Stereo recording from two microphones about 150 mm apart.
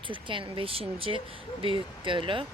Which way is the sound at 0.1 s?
35° right (ahead or behind).